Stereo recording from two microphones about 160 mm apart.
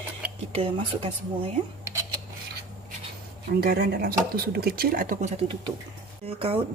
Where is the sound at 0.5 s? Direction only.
40° right (ahead or behind).